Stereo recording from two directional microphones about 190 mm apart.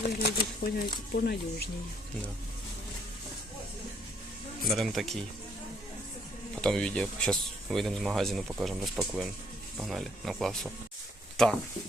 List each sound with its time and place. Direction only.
0.0 s speech: 50° left (ahead or behind)
4.6 s speech: centre (ahead or behind)
6.6 s speech: 5° left (ahead or behind)